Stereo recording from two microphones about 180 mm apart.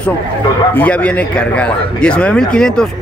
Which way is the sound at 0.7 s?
10° left (ahead or behind).